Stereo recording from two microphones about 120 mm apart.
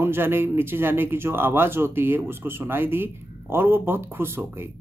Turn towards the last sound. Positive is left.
turn(degrees=-20)  # may be behind; listen again after turning